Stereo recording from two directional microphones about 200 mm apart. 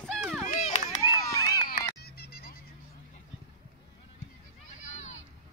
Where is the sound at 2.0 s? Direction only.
50° left (ahead or behind).